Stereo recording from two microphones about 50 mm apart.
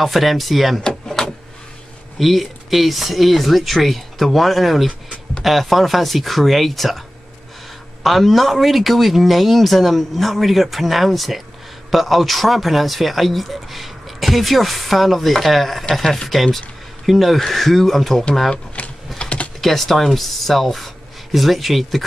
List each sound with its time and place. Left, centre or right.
0.0 s speech: centre
0.8 s a sound: centre
2.1 s speech: centre
8.0 s speech: centre
18.8 s typing: left
19.6 s speech: centre